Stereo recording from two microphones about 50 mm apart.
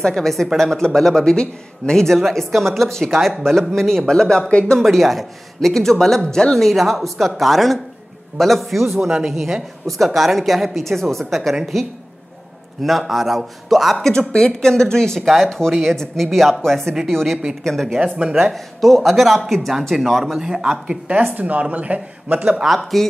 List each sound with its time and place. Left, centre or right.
0.0 s a man's voice: centre
4.1 s a man's voice: centre
4.7 s a man's voice: centre
6.7 s speech: centre
12.8 s speech: centre
14.0 s a man's voice: centre
17.9 s speech: centre
18.3 s a man's voice: centre
21.2 s speech: right
22.8 s speech: centre